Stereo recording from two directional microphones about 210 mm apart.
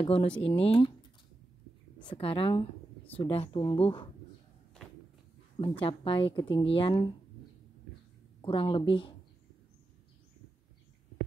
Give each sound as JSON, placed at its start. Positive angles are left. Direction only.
{"t": 0.0, "sound": "speech", "side_deg": 25}
{"t": 2.0, "sound": "speech", "side_deg": 25}
{"t": 5.6, "sound": "speech", "side_deg": 25}
{"t": 8.4, "sound": "speech", "side_deg": 25}